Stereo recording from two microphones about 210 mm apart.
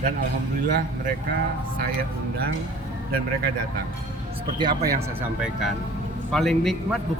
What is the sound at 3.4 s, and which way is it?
Speech, 45° right (ahead or behind).